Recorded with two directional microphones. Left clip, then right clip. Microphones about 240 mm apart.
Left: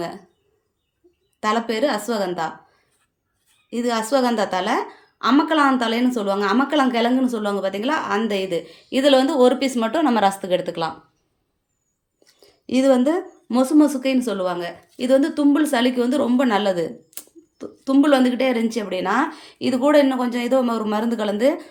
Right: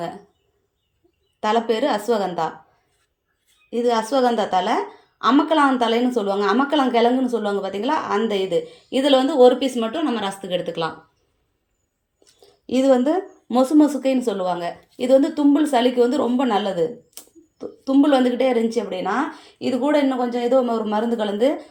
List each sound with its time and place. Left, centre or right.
1.4 s a woman's voice: centre
3.7 s a woman's voice: centre
12.2 s a woman's voice: centre